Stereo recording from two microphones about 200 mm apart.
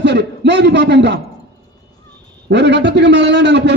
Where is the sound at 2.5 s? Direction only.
60° right (ahead or behind).